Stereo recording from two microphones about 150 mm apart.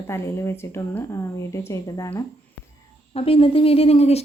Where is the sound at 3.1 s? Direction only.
40° left (ahead or behind).